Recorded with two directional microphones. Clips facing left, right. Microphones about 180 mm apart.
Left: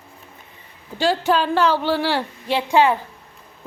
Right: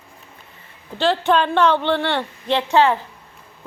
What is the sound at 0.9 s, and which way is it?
A woman's voice, 10° left (ahead or behind).